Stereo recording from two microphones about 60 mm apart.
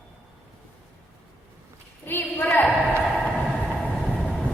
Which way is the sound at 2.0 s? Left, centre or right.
Left.